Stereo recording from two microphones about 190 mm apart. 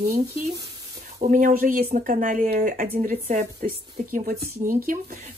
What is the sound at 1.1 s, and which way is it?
Speech, 45° right (ahead or behind).